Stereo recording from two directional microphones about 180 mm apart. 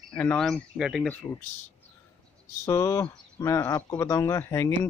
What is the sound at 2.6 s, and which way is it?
Speech, 15° left (ahead or behind).